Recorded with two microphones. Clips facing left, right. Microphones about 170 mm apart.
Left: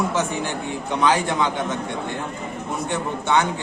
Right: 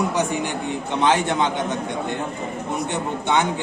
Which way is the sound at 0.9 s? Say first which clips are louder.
Right 1 dB; 25° right (ahead or behind).